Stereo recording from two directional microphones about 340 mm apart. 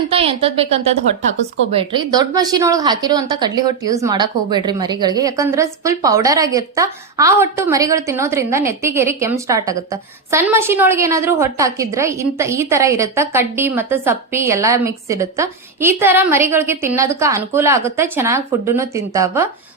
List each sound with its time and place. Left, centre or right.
0.1 s a woman's voice: centre